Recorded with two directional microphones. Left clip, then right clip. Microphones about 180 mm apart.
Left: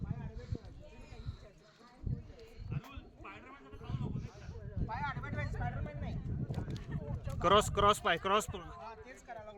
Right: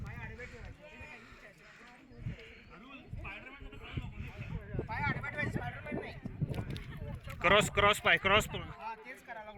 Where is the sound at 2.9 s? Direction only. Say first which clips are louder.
Right 4 dB; 60° right (ahead or behind).